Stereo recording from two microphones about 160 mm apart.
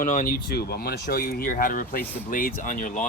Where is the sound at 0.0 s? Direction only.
55° left (ahead or behind).